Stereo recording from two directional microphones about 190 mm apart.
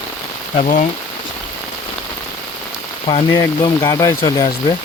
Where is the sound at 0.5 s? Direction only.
35° left (ahead or behind).